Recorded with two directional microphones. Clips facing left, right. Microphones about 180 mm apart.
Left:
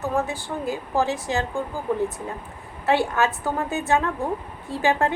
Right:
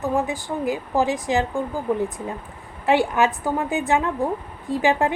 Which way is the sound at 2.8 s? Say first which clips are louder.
Right 2 dB; 15° right (ahead or behind).